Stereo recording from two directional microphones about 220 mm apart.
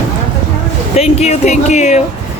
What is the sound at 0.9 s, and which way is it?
Speech, 30° left (ahead or behind).